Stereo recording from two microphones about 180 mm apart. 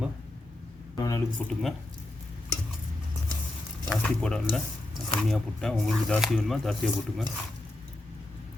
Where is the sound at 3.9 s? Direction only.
5° left (ahead or behind).